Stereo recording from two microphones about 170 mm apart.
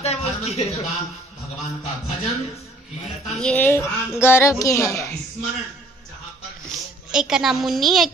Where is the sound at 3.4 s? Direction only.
5° left (ahead or behind).